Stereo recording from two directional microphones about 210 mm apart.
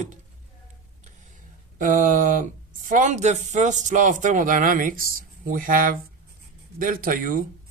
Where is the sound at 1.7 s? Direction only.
40° right (ahead or behind).